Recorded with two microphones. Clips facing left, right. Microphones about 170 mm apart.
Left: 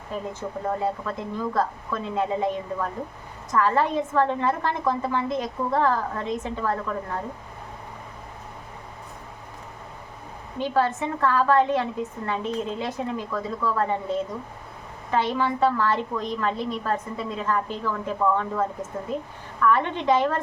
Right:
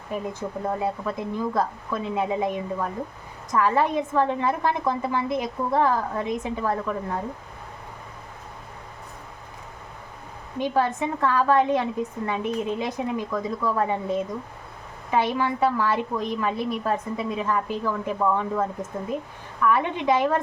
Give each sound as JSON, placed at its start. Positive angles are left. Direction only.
{"t": 0.1, "sound": "a woman's voice", "side_deg": -15}
{"t": 10.6, "sound": "a woman's voice", "side_deg": -15}